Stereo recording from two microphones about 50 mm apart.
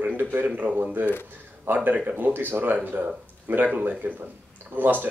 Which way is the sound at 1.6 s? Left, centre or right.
Right.